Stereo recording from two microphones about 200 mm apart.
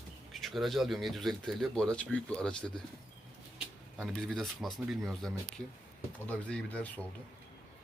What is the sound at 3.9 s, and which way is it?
Speech, centre (ahead or behind).